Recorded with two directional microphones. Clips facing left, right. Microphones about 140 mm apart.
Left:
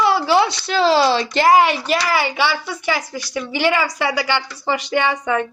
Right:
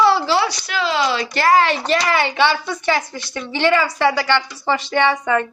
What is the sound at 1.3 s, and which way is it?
Speech, 15° left (ahead or behind).